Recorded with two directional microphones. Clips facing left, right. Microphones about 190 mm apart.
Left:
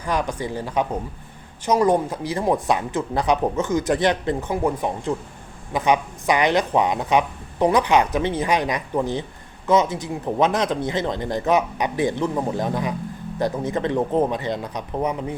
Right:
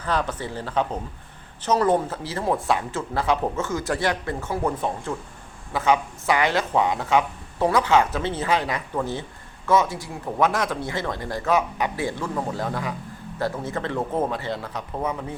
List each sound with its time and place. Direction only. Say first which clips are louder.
0.0 s speech: left 2 dB; 15° left (ahead or behind)